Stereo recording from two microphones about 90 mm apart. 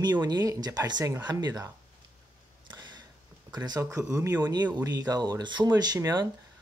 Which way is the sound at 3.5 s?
50° right (ahead or behind).